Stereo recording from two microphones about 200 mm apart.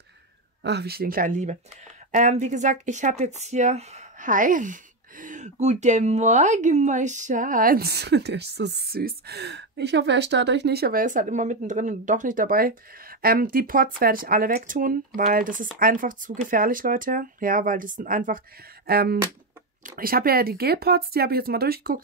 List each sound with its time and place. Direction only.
0.7 s speech: 55° right (ahead or behind)